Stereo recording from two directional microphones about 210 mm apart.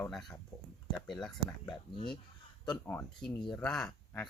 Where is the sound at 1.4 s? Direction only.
20° left (ahead or behind).